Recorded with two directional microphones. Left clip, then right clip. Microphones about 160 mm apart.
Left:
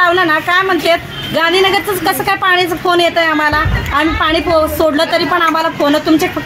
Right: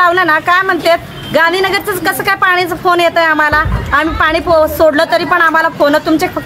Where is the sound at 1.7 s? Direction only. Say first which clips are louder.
Left 1 dB; 40° right (ahead or behind).